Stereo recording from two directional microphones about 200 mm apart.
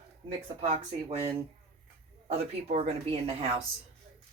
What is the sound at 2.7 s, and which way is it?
Speech, 30° right (ahead or behind).